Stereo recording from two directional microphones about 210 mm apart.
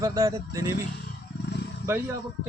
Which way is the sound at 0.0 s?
15° right (ahead or behind).